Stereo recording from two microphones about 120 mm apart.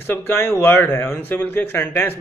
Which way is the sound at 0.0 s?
20° left (ahead or behind).